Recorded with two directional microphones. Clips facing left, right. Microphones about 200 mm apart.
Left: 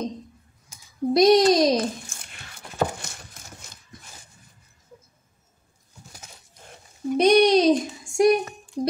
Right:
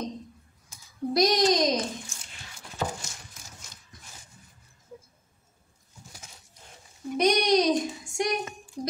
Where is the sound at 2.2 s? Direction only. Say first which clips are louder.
Left 3 dB; 60° left (ahead or behind).